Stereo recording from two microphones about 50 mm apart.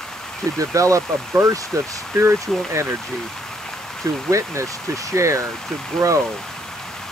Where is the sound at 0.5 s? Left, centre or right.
Right.